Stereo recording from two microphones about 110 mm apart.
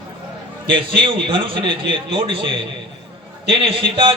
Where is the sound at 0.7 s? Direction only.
50° right (ahead or behind).